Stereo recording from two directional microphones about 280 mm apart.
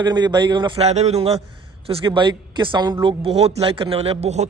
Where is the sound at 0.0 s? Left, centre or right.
Centre.